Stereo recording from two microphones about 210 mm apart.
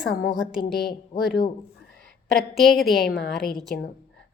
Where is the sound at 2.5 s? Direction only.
Centre (ahead or behind).